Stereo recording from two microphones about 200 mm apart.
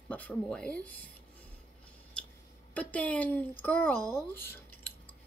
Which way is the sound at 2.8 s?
5° left (ahead or behind).